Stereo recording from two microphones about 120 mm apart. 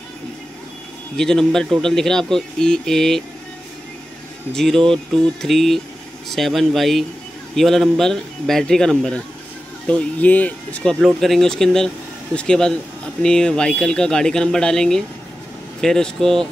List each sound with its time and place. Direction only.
1.1 s speech: 5° left (ahead or behind)
4.6 s speech: 5° left (ahead or behind)